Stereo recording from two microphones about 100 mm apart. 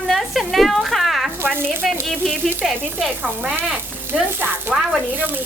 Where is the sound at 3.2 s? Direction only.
15° right (ahead or behind).